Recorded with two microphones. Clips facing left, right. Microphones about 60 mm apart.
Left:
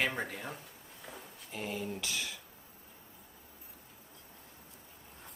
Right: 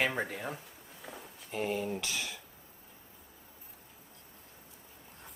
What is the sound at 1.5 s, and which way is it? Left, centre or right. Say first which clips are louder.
Speech: right 5 dB; centre.